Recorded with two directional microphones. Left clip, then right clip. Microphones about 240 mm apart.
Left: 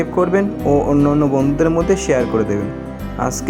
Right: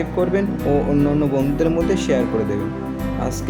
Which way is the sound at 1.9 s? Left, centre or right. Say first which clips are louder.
Left 3 dB; centre.